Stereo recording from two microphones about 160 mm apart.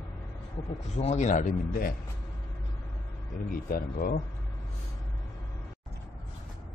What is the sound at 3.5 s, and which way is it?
Speech, 65° left (ahead or behind).